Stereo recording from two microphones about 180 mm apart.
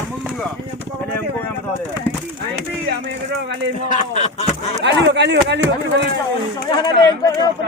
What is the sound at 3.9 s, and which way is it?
Speech, 40° left (ahead or behind).